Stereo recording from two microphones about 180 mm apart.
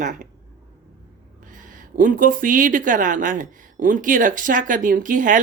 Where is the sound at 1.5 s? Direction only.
45° right (ahead or behind).